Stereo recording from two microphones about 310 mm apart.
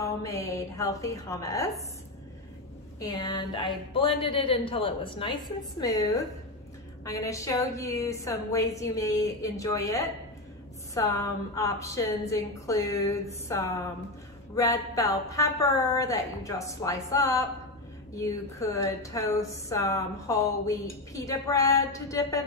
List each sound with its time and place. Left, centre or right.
0.0 s a woman's voice: centre
3.0 s a woman's voice: centre